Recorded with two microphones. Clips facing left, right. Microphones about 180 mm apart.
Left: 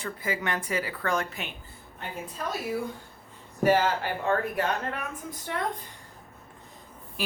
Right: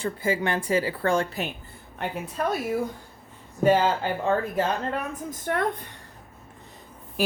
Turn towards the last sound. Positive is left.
turn(degrees=-45)  # may be behind; listen again after turning